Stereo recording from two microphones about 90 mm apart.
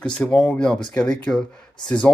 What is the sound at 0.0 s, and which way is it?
Speech, 10° left (ahead or behind).